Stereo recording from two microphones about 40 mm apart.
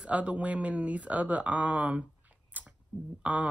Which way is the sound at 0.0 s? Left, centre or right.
Right.